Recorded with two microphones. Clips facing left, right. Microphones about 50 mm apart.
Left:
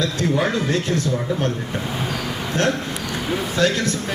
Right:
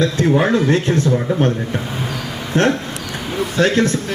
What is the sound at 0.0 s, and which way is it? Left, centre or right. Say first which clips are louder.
A man's voice: right 5 dB; right.